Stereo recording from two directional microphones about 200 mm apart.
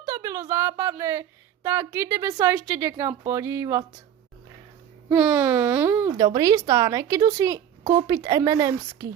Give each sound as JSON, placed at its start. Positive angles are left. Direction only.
{"t": 0.0, "sound": "a woman's voice", "side_deg": -15}
{"t": 5.0, "sound": "speech", "side_deg": -10}